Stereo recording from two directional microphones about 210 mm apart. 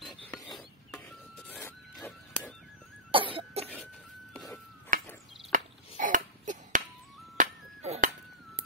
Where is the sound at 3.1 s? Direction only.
25° right (ahead or behind).